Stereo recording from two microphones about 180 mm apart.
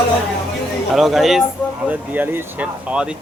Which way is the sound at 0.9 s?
Centre (ahead or behind).